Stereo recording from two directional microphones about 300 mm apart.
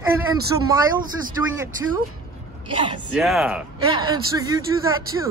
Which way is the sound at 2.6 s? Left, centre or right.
Centre.